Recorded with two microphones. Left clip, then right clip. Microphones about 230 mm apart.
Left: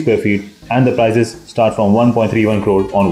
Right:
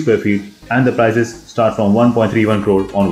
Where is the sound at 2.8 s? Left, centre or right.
Centre.